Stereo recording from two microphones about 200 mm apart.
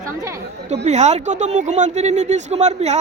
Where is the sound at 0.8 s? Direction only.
35° right (ahead or behind).